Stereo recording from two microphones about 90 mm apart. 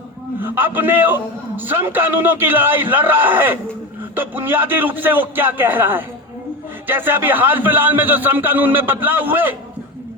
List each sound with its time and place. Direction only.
0.3 s a man's voice: 20° right (ahead or behind)